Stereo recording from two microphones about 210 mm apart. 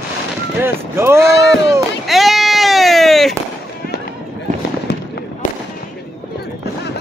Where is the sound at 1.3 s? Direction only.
55° left (ahead or behind).